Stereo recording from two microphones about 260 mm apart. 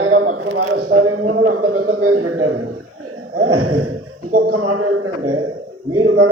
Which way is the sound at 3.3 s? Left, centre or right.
Right.